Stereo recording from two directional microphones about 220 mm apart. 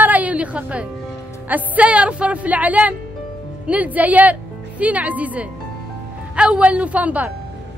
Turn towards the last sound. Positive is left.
turn(degrees=-5)  # may be behind; listen again after turning